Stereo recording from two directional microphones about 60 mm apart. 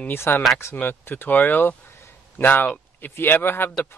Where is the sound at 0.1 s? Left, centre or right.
Left.